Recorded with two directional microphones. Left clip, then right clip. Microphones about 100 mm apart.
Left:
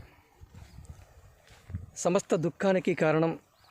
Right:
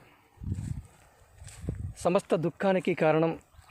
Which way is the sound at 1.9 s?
20° left (ahead or behind).